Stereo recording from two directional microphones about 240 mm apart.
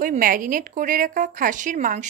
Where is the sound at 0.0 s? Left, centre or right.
Right.